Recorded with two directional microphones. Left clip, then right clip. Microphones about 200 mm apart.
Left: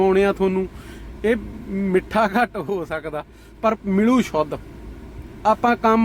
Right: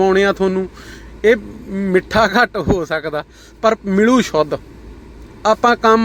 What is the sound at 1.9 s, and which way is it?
Speech, 15° right (ahead or behind).